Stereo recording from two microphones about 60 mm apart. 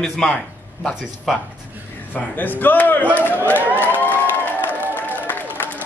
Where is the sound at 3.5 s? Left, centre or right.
Right.